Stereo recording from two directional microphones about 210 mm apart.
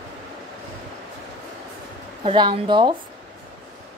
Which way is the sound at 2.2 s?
25° right (ahead or behind).